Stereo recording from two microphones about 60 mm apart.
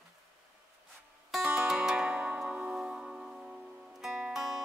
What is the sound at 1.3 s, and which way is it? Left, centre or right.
Music, centre.